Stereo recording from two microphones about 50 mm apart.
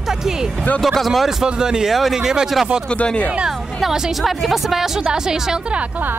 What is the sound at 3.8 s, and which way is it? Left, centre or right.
Speech, centre.